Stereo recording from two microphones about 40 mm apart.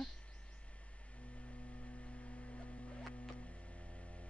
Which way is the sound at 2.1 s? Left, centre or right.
Left.